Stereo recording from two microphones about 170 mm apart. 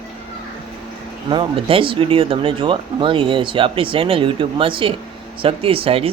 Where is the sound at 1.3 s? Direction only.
30° right (ahead or behind).